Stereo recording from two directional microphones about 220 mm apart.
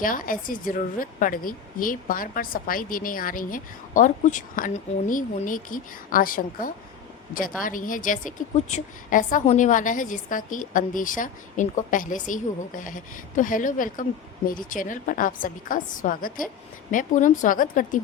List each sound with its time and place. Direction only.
0.0 s a woman's voice: 40° left (ahead or behind)